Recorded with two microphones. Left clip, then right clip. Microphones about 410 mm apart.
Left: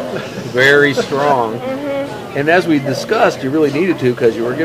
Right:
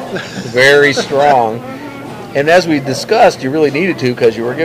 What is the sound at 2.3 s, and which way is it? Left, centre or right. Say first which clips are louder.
Speech: right 3 dB; right.